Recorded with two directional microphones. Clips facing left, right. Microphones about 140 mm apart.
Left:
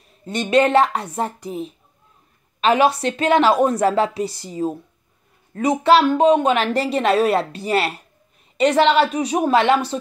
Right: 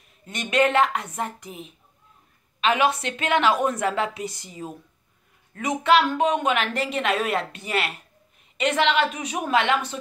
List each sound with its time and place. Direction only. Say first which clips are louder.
0.2 s a woman's voice: left 5 dB; 30° left (ahead or behind)